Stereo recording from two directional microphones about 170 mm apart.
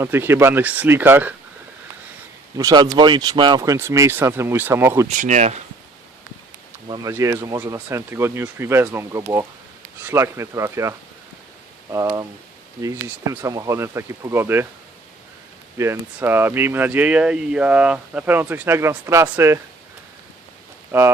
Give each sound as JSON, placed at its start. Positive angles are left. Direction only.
{"t": 0.0, "sound": "speech", "side_deg": -15}
{"t": 2.6, "sound": "speech", "side_deg": -20}
{"t": 5.0, "sound": "speech", "side_deg": -45}
{"t": 6.8, "sound": "speech", "side_deg": -25}
{"t": 15.8, "sound": "speech", "side_deg": -15}
{"t": 20.9, "sound": "speech", "side_deg": -10}